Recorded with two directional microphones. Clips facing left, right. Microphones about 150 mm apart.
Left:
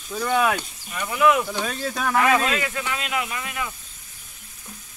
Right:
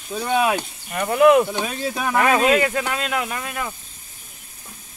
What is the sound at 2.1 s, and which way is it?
Speech, 50° right (ahead or behind).